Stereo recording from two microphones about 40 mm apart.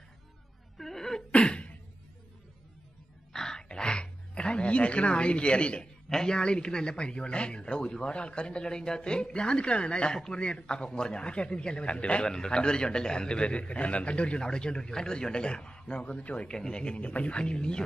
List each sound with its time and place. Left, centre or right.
0.7 s a sound: centre
1.3 s cough: left
3.3 s music: centre
5.8 s speech: centre; by 12.3 s left
12.3 s speech: centre
16.0 s speech: left
16.4 s speech: centre